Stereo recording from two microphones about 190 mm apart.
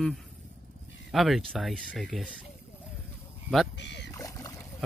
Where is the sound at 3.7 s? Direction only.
65° left (ahead or behind).